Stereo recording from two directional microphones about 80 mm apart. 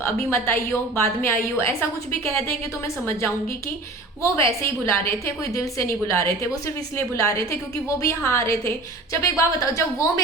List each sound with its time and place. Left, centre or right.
0.0 s a woman's voice: left
4.2 s a woman's voice: left